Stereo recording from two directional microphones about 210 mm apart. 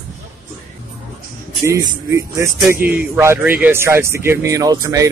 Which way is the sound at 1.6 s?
15° right (ahead or behind).